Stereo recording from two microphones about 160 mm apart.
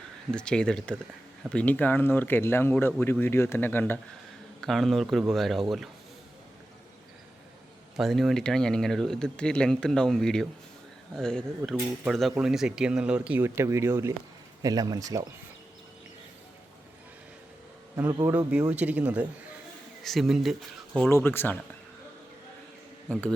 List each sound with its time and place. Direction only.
0.3 s speech: 5° left (ahead or behind)
4.6 s speech: centre (ahead or behind)
7.9 s speech: centre (ahead or behind); by 15.3 s 20° right (ahead or behind)
18.1 s speech: 25° right (ahead or behind)
18.7 s speech: 10° right (ahead or behind)
21.1 s speech: 15° left (ahead or behind)